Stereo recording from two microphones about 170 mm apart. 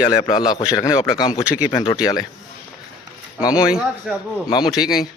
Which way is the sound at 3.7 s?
5° right (ahead or behind).